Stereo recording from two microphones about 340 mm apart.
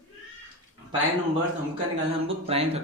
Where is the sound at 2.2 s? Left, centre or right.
Centre.